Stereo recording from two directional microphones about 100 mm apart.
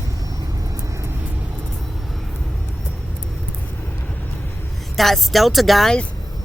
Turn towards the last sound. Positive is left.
turn(degrees=5)  # may be behind; listen again after turning